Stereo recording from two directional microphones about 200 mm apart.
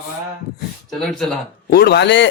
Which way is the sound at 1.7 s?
55° left (ahead or behind).